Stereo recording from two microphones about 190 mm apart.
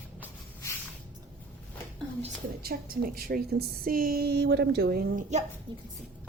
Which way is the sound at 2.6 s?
55° right (ahead or behind).